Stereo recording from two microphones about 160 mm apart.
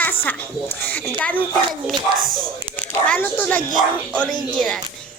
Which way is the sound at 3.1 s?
10° left (ahead or behind).